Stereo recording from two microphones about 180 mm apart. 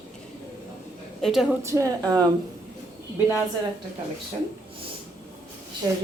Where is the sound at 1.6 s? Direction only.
15° right (ahead or behind).